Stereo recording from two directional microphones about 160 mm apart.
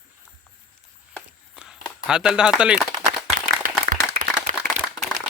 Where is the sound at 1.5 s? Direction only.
5° right (ahead or behind).